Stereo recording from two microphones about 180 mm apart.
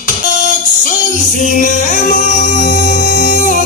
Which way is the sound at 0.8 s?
45° left (ahead or behind).